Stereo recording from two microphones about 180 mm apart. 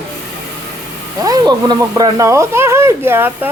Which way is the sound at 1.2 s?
20° right (ahead or behind).